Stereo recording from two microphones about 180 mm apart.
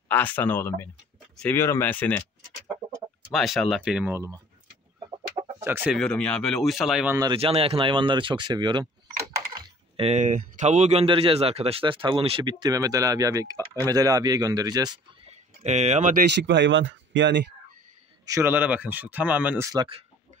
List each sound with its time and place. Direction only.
0.1 s speech: 10° left (ahead or behind)
3.3 s speech: centre (ahead or behind)
5.6 s speech: 10° right (ahead or behind)
5.9 s speech: 5° left (ahead or behind)
7.2 s speech: 25° right (ahead or behind)
15.2 s a sound: 40° right (ahead or behind)
16.2 s speech: 75° right (ahead or behind)
18.2 s speech: 15° right (ahead or behind)
19.7 s speech: 25° right (ahead or behind)